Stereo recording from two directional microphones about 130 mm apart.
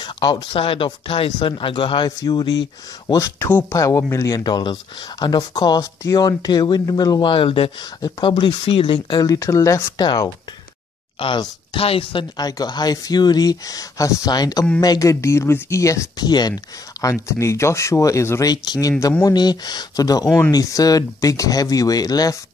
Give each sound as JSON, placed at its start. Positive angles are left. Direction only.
{"t": 0.0, "sound": "a woman's voice", "side_deg": 35}